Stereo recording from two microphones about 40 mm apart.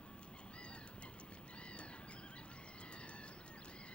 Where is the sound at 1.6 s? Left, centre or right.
Left.